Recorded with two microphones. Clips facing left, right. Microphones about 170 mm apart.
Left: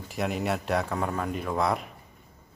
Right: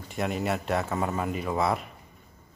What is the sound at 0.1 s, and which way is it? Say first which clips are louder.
Speech: even; centre (ahead or behind).